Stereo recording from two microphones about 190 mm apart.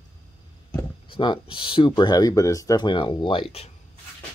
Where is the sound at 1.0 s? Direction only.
25° left (ahead or behind).